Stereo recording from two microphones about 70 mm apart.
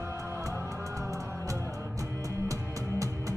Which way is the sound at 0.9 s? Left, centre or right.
Right.